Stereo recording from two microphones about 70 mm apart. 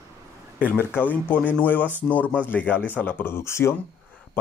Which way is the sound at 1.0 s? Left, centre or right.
Left.